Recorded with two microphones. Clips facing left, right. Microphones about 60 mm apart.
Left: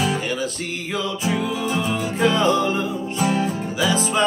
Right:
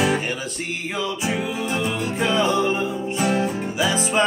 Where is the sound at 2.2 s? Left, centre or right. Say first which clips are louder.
Left 2 dB; centre.